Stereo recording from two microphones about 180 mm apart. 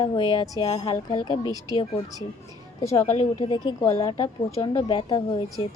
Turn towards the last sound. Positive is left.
turn(degrees=25)  # may be behind; listen again after turning